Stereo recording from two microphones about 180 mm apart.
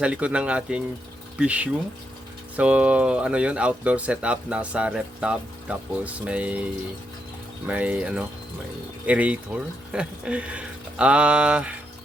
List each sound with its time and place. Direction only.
0.0 s speech: 5° right (ahead or behind)
7.7 s speech: 5° right (ahead or behind)